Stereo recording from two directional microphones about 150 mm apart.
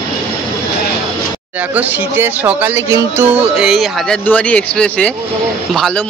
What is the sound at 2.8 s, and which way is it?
Music, 20° right (ahead or behind).